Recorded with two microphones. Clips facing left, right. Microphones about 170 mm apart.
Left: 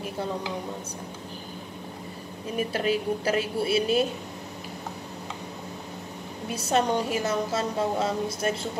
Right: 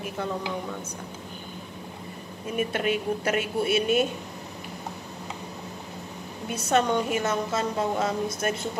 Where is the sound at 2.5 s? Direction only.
30° left (ahead or behind).